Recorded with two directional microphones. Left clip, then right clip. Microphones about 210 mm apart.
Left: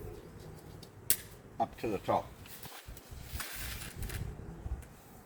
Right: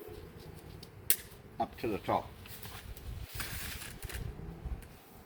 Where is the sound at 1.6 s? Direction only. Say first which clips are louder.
Left 1 dB; 10° left (ahead or behind).